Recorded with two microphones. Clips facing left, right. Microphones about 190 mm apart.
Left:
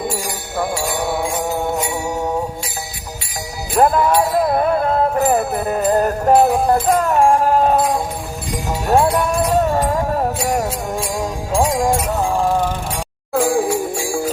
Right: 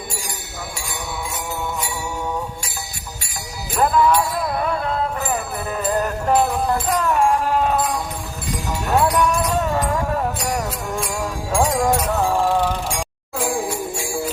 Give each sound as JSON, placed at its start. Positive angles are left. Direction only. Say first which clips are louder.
{"t": 0.5, "sound": "music", "louder": "left 14 dB", "side_deg": 60}
{"t": 3.8, "sound": "music", "louder": "left 3 dB", "side_deg": 45}
{"t": 8.9, "sound": "music", "louder": "left 3 dB", "side_deg": 30}
{"t": 11.5, "sound": "music", "louder": "left 2 dB", "side_deg": 15}
{"t": 13.3, "sound": "jingle bell", "louder": "left 7 dB", "side_deg": 55}